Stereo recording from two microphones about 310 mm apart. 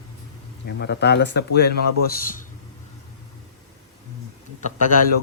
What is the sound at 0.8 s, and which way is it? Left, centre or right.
A man's voice, left.